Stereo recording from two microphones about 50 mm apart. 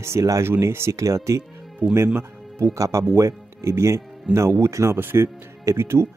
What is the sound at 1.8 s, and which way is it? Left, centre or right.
Speech, right.